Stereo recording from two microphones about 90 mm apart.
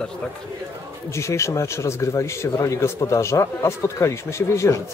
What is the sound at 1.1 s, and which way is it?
A man's voice, 35° left (ahead or behind).